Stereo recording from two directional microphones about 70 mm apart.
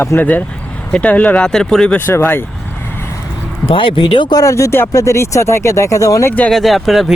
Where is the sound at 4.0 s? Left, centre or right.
Left.